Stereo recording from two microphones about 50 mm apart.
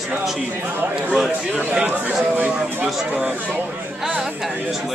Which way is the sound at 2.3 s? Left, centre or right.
Right.